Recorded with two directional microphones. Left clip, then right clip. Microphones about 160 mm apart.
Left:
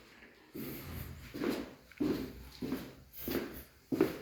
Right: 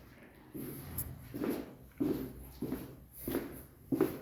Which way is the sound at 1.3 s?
20° right (ahead or behind).